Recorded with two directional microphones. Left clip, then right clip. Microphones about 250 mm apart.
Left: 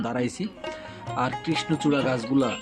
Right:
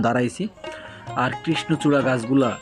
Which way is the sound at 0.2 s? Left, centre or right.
Centre.